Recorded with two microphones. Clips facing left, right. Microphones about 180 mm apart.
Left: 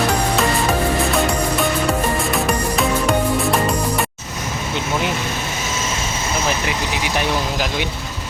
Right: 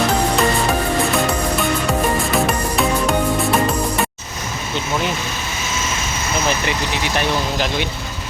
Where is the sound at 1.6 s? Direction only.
Centre (ahead or behind).